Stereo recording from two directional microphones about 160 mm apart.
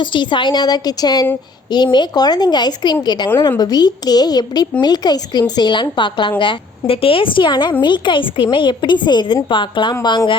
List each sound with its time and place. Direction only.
0.0 s a woman's voice: 30° left (ahead or behind)
3.2 s a woman's voice: 15° left (ahead or behind)